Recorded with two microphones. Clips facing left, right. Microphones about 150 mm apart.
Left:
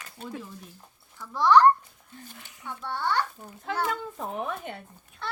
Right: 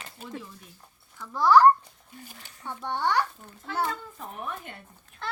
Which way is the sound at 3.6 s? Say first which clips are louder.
Left 1 dB; 80° left.